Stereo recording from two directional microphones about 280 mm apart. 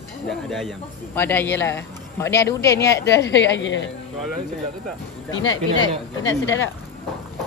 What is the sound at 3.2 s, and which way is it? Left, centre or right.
Speech, left.